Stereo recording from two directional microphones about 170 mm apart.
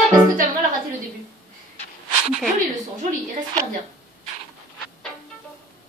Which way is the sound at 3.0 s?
50° right (ahead or behind).